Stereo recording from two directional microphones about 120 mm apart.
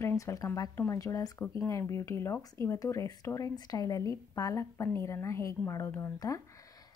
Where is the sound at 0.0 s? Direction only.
25° left (ahead or behind).